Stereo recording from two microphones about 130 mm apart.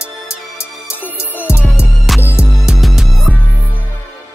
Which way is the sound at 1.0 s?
15° left (ahead or behind).